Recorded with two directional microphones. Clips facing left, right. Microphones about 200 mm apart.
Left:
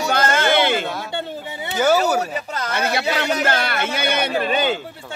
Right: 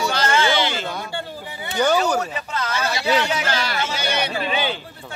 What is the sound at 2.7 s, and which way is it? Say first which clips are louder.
Speech: even; 60° left (ahead or behind).